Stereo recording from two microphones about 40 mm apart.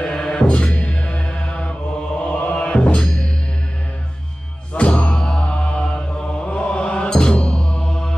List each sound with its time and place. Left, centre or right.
0.0 s music: centre
0.7 s mantra: left
4.7 s music: left
5.1 s chant: centre
7.1 s mantra: left